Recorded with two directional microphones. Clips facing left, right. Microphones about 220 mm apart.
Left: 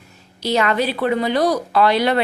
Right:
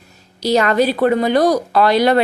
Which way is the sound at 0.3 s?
40° right (ahead or behind).